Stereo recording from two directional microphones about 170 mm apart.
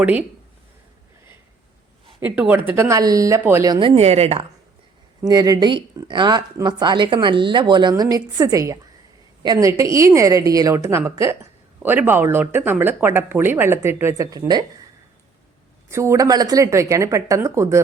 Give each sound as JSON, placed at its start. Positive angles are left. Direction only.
{"t": 0.0, "sound": "speech", "side_deg": -10}
{"t": 2.2, "sound": "speech", "side_deg": -10}
{"t": 5.3, "sound": "speech", "side_deg": -20}
{"t": 15.9, "sound": "speech", "side_deg": -15}